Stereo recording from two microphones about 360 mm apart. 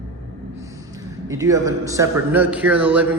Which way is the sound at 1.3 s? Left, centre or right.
Centre.